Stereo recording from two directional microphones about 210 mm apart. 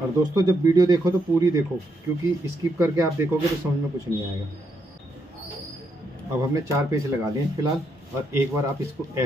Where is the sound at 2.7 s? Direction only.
15° right (ahead or behind).